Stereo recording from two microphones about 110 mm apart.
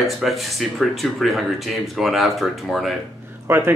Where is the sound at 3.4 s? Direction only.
20° right (ahead or behind).